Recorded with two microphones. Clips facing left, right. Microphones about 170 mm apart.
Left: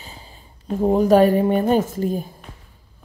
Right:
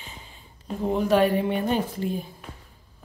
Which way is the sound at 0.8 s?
40° left (ahead or behind).